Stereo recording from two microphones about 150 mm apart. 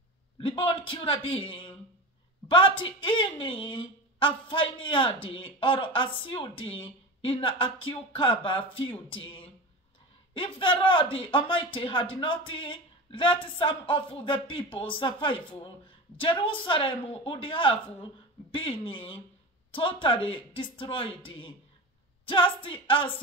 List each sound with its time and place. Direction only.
0.4 s speech: 35° left (ahead or behind)
1.5 s a sound: 35° left (ahead or behind)
2.4 s a woman's voice: 35° left (ahead or behind)